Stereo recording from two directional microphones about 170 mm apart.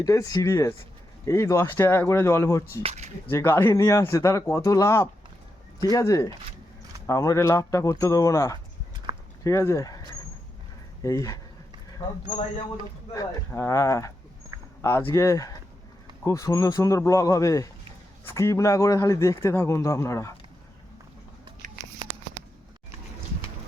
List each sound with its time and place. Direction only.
0.0 s a man's voice: 20° left (ahead or behind)
2.8 s speech: 40° right (ahead or behind)
3.2 s a man's voice: 15° left (ahead or behind)
9.1 s a sound: 25° right (ahead or behind)
9.4 s speech: 15° left (ahead or behind)
11.0 s speech: 20° left (ahead or behind)
13.1 s a man's voice: 20° left (ahead or behind)
21.6 s a sound: 50° right (ahead or behind)